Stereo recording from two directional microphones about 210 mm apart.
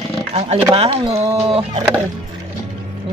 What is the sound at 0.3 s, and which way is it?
Speech, 30° right (ahead or behind).